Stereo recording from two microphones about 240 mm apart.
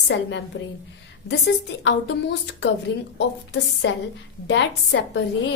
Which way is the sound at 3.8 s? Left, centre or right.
Left.